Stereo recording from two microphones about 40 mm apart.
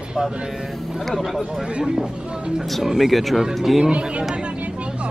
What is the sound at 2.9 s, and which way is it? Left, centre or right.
Speech, centre.